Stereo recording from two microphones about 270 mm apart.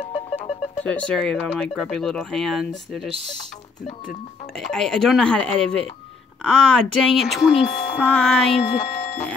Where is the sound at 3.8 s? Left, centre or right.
Left.